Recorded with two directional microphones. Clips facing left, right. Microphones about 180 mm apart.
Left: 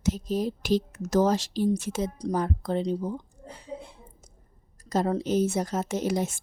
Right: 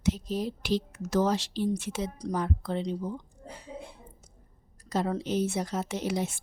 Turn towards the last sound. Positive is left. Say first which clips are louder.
# left 3 dB
turn(degrees=45)  # may be behind; listen again after turning